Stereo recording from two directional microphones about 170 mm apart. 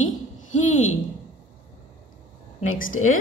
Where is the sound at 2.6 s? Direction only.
50° left (ahead or behind).